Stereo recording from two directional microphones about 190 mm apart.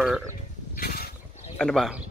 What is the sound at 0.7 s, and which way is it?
Pulleys, 50° left (ahead or behind).